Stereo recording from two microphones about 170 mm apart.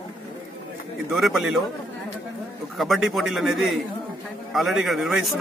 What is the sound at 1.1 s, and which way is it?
Speech, centre (ahead or behind).